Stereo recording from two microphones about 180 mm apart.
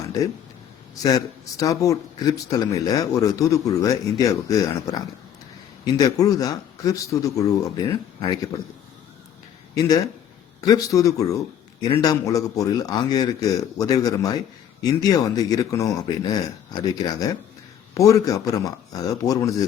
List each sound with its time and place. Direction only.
1.0 s speech: 20° left (ahead or behind)
10.6 s speech: 20° left (ahead or behind)